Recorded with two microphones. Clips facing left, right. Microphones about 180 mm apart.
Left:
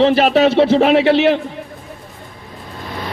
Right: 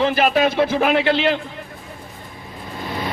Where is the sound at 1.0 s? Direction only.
70° left (ahead or behind).